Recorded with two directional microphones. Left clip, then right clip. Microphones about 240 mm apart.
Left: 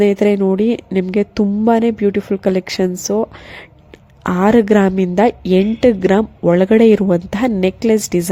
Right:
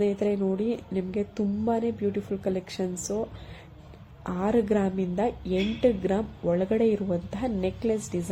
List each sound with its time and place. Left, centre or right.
0.0 s a woman's voice: left